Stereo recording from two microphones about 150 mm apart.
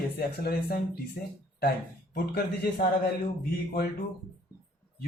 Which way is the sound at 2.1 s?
85° left.